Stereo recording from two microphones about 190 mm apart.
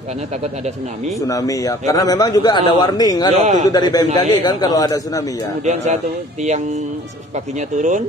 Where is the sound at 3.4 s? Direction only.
40° right (ahead or behind).